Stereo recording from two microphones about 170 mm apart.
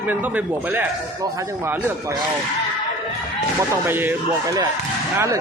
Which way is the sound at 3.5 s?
15° right (ahead or behind).